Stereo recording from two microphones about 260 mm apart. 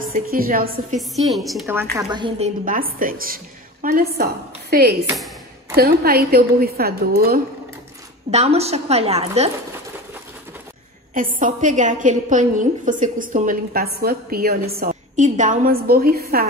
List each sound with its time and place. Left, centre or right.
0.1 s a woman's voice: right
0.9 s a woman's voice: centre
2.0 s a woman's voice: centre; by 4.9 s right
5.0 s a woman's voice: centre
5.8 s a woman's voice: right
8.3 s a woman's voice: right
11.1 s a woman's voice: right